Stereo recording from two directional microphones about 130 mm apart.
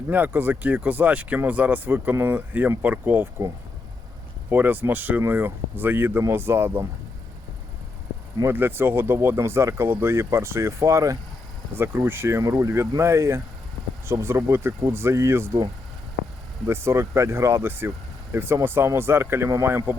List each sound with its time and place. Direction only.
0.1 s speech: 15° right (ahead or behind)
8.4 s speech: 15° right (ahead or behind)